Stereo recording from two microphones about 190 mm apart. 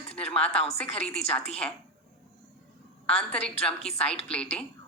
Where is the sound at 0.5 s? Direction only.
35° left (ahead or behind).